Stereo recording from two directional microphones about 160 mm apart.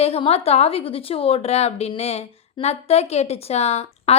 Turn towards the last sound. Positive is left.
turn(degrees=45)  # may be behind; listen again after turning